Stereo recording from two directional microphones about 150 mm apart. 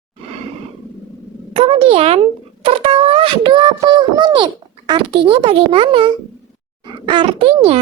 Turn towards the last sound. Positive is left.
turn(degrees=-40)  # may be behind; listen again after turning